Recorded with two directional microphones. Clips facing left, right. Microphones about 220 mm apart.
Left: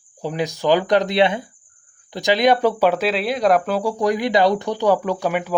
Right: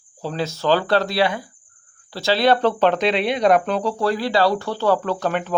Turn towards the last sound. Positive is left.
turn(degrees=10)  # may be behind; listen again after turning